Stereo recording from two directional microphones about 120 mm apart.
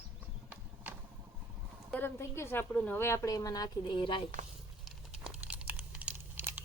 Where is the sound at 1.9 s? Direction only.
20° left (ahead or behind); by 4.2 s 45° left (ahead or behind).